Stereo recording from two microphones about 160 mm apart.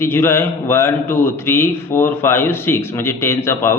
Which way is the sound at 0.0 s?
15° left (ahead or behind).